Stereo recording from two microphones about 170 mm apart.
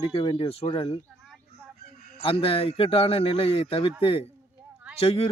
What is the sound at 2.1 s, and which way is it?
A man's voice, 35° left (ahead or behind).